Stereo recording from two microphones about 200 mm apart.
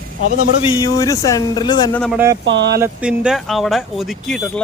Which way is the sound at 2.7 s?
10° right (ahead or behind).